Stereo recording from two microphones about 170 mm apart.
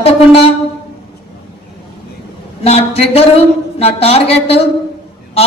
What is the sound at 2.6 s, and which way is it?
A woman's voice, 35° left (ahead or behind).